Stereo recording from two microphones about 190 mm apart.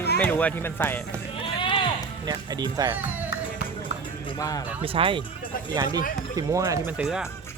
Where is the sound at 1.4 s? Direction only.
25° left (ahead or behind).